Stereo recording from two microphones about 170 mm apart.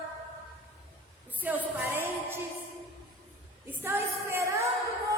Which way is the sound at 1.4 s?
10° right (ahead or behind).